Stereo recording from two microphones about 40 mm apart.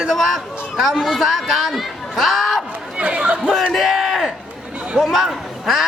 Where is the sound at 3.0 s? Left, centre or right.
Right.